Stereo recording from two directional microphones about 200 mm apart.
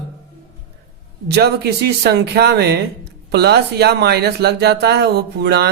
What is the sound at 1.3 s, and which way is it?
A woman's voice, 55° right (ahead or behind).